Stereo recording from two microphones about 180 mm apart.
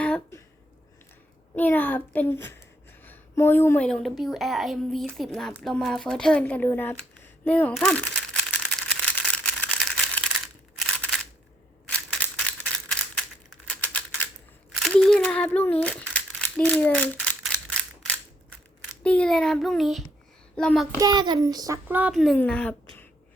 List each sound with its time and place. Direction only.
0.0 s a sound: 10° left (ahead or behind)
1.5 s speech: 10° left (ahead or behind)
7.4 s a sound: 10° left (ahead or behind)
10.8 s single-lens reflex camera: centre (ahead or behind)
11.9 s a sound: 5° left (ahead or behind)
13.7 s typewriter: 10° left (ahead or behind)
14.8 s crumpling: centre (ahead or behind)
19.0 s speech: 5° left (ahead or behind)
21.0 s a child's voice: 25° right (ahead or behind)
21.8 s a woman's voice: 10° right (ahead or behind); by 23.0 s 5° left (ahead or behind)